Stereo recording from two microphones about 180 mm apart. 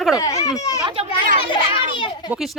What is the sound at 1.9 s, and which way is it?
Children playing, 25° left (ahead or behind).